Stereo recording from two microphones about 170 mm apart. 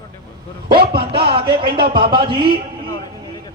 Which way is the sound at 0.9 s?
30° right (ahead or behind).